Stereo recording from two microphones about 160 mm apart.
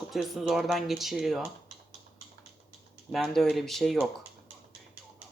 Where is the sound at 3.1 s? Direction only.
Centre (ahead or behind).